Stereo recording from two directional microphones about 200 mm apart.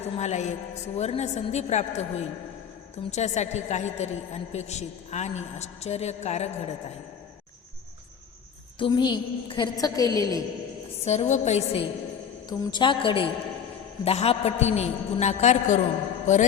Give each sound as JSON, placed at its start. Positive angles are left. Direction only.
{"t": 0.0, "sound": "a woman's voice", "side_deg": 35}
{"t": 8.8, "sound": "a woman's voice", "side_deg": 25}
{"t": 11.0, "sound": "a woman's voice", "side_deg": 35}
{"t": 16.2, "sound": "mantra", "side_deg": 35}